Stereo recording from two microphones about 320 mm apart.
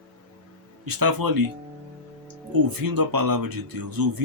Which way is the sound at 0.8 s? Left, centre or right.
Right.